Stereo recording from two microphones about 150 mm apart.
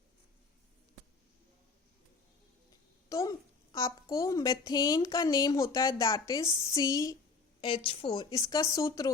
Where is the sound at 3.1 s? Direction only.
20° left (ahead or behind).